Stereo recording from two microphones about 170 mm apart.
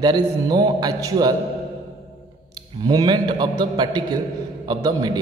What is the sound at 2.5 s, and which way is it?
A man's voice, 25° right (ahead or behind).